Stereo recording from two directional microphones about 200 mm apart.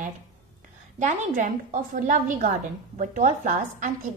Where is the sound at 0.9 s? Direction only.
35° right (ahead or behind).